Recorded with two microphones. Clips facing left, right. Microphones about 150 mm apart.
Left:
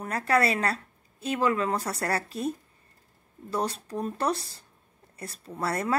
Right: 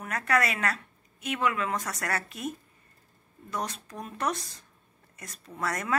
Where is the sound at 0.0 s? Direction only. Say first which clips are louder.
Left 3 dB; 30° left (ahead or behind).